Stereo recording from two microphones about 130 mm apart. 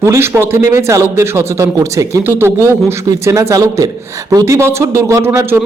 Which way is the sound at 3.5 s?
25° right (ahead or behind).